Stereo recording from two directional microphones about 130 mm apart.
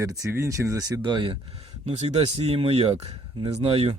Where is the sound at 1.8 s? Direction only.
55° right (ahead or behind).